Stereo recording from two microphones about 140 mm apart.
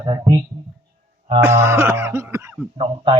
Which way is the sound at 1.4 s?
20° right (ahead or behind).